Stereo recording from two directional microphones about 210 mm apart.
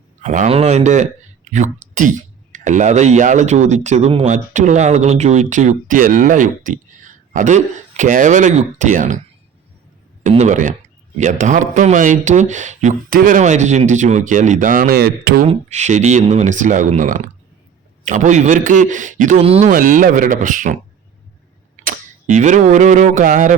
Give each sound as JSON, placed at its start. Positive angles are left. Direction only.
{"t": 0.2, "sound": "speech", "side_deg": -35}
{"t": 10.2, "sound": "speech", "side_deg": -35}
{"t": 15.4, "sound": "speech", "side_deg": -35}
{"t": 21.8, "sound": "camera", "side_deg": -35}